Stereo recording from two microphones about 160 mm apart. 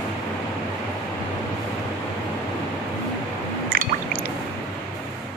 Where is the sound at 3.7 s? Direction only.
65° right (ahead or behind).